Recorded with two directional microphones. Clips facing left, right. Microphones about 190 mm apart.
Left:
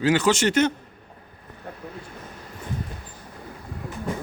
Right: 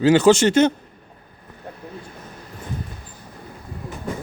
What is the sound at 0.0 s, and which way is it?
Speech, 30° right (ahead or behind).